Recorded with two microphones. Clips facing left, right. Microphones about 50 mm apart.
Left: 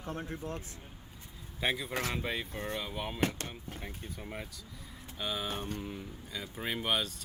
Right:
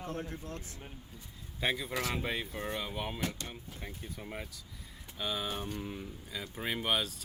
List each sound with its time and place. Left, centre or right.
0.1 s speech: left
1.6 s speech: centre
1.9 s speech: left
2.1 s speech: centre
3.2 s speech: left
3.8 s speech: centre